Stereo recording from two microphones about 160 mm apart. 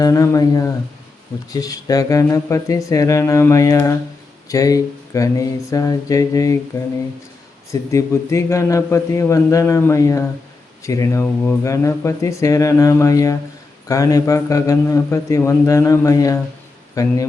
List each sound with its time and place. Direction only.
0.0 s a man's voice: 20° left (ahead or behind)
7.7 s a man's voice: 20° left (ahead or behind)